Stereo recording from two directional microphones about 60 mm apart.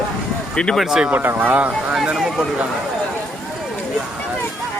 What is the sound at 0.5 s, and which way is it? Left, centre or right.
Speech, centre.